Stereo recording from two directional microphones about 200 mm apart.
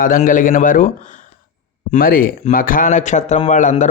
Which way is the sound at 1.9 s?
45° left (ahead or behind).